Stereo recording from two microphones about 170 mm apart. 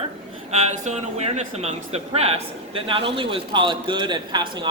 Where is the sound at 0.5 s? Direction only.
40° right (ahead or behind).